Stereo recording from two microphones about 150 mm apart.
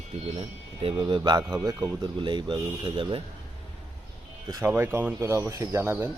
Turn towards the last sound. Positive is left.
turn(degrees=-15)  # may be behind; listen again after turning